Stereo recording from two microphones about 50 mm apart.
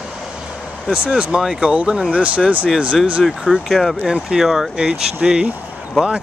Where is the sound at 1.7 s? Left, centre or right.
Right.